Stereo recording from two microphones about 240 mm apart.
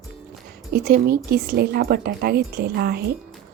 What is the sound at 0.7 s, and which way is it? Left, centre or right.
Speech, right.